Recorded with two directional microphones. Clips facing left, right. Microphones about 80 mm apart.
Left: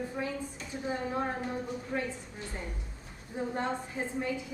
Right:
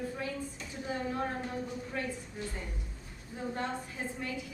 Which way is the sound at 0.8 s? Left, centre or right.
Left.